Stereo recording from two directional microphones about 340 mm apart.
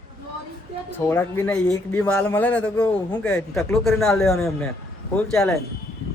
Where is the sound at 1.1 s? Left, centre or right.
Centre.